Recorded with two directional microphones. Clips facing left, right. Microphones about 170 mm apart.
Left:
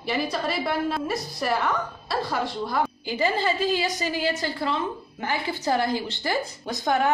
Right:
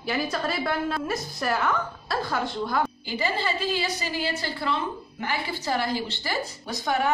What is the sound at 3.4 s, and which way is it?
Speech, 50° left (ahead or behind).